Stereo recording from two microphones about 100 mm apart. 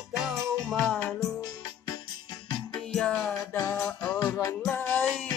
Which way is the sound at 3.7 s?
15° left (ahead or behind).